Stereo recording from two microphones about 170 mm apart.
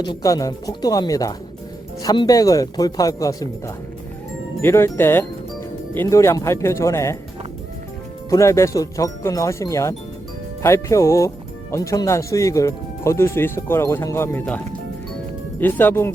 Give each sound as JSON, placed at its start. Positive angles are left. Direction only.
{"t": 0.0, "sound": "speech", "side_deg": 20}
{"t": 4.6, "sound": "speech", "side_deg": 15}
{"t": 8.3, "sound": "speech", "side_deg": 20}
{"t": 15.6, "sound": "speech", "side_deg": 10}